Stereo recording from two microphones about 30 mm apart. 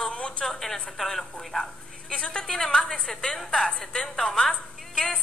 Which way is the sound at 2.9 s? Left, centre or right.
Left.